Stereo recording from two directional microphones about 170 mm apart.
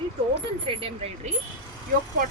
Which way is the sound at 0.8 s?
35° right (ahead or behind).